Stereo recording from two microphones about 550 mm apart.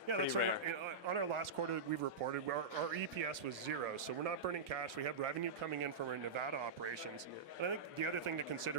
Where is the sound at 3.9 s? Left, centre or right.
Right.